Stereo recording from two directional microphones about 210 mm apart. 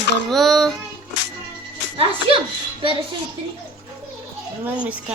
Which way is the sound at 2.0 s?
25° right (ahead or behind).